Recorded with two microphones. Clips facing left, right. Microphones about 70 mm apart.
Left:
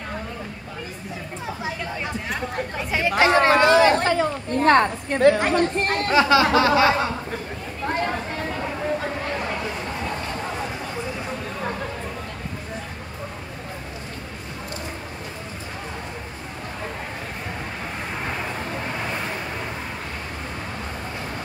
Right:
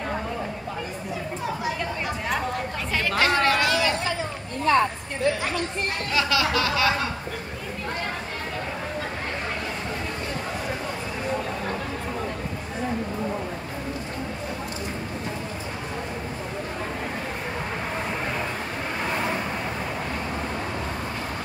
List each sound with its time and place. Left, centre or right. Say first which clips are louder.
2.9 s chatter: left 5 dB; centre; by 6.1 s left
6.1 s speech: left 7 dB; left